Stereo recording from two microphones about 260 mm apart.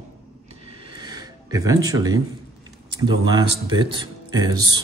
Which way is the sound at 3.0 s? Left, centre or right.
Centre.